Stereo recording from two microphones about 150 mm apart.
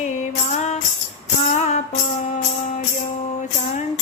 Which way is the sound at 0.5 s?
50° left (ahead or behind).